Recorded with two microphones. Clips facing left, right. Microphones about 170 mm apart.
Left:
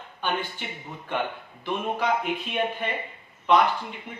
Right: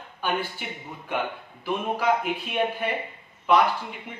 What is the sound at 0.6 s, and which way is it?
Speech, 5° right (ahead or behind).